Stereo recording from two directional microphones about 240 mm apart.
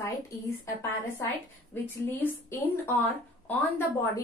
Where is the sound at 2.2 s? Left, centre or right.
Centre.